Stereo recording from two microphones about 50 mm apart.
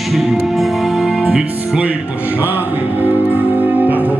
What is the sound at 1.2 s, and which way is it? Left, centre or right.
Music, right.